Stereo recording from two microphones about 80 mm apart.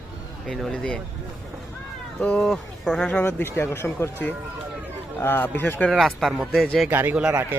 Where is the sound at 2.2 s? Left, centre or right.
Centre.